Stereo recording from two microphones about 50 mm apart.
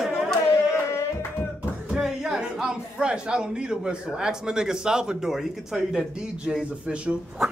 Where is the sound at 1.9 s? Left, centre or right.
Centre.